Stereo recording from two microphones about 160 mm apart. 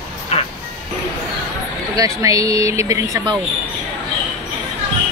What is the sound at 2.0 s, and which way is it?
Speech, 20° right (ahead or behind).